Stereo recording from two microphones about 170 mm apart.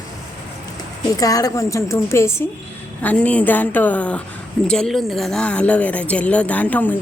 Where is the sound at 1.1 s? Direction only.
20° left (ahead or behind).